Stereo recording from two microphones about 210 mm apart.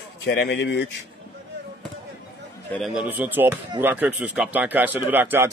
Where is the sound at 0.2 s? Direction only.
50° left (ahead or behind).